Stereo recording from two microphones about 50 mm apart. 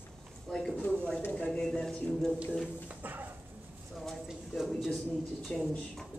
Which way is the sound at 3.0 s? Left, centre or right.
Right.